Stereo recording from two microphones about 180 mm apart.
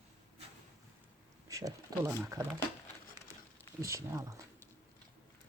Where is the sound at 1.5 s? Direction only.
15° right (ahead or behind).